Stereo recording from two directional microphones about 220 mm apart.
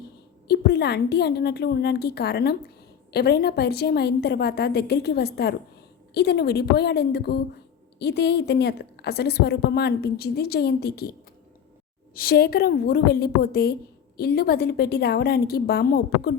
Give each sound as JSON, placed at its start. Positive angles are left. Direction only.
{"t": 0.4, "sound": "a woman's voice", "side_deg": 50}
{"t": 12.1, "sound": "a woman's voice", "side_deg": 45}